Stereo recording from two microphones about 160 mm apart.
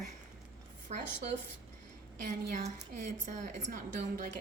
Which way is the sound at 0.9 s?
45° right (ahead or behind).